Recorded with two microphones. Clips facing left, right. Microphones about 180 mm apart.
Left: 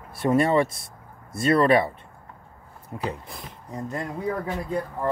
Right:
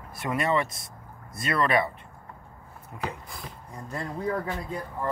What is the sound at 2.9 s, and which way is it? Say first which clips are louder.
Speech: left 4 dB; 30° left (ahead or behind).